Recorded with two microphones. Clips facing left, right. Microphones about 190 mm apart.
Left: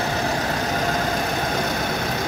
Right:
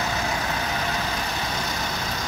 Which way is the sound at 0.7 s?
45° left (ahead or behind).